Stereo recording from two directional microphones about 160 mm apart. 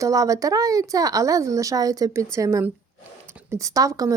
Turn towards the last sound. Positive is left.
turn(degrees=-20)  # may be behind; listen again after turning